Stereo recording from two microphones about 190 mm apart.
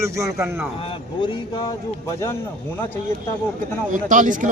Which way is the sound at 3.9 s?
40° right (ahead or behind).